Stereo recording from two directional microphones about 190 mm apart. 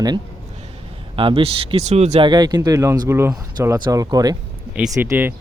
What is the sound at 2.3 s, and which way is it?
Speech, 20° right (ahead or behind).